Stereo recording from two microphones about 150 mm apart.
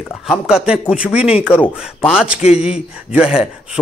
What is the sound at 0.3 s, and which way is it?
Speech, 5° right (ahead or behind).